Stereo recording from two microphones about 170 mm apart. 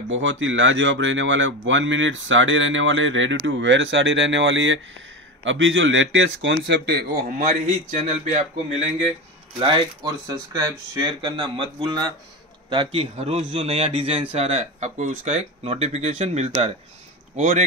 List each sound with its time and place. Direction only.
0.3 s speech: 90° right
6.6 s speech: 80° right
7.3 s speech: 50° right (ahead or behind)